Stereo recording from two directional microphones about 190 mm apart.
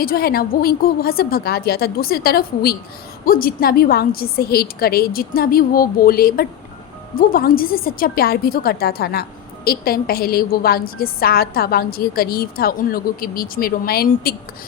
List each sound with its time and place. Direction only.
0.0 s a woman's voice: 50° left (ahead or behind)